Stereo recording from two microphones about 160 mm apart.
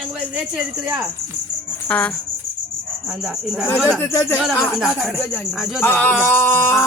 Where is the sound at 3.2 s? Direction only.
5° right (ahead or behind).